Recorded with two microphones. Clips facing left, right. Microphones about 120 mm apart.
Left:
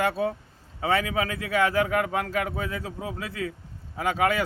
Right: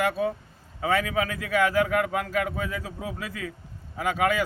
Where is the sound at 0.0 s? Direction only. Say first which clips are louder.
Even; 30° left (ahead or behind).